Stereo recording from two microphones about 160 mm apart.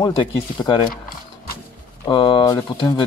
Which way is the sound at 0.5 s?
30° left (ahead or behind).